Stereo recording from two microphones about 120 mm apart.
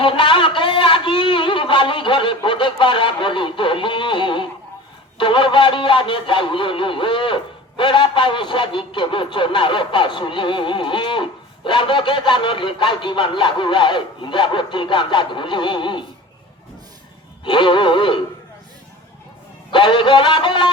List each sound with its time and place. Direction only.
0.0 s a sound: 45° left (ahead or behind)
5.1 s speech: 45° left (ahead or behind)
17.4 s neigh: 40° left (ahead or behind)
19.7 s speech: 40° left (ahead or behind)